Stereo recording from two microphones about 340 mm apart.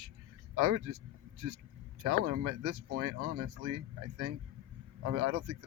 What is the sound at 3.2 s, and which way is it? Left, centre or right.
Speech, right.